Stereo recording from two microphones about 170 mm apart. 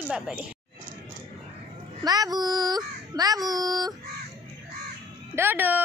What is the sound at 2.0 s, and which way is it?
A child's voice, 20° right (ahead or behind).